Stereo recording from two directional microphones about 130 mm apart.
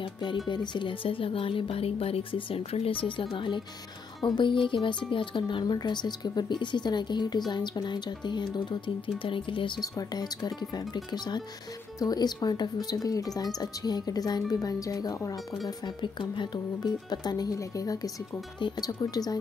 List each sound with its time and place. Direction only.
0.0 s a woman's voice: 35° left (ahead or behind)
15.8 s speech: 35° left (ahead or behind)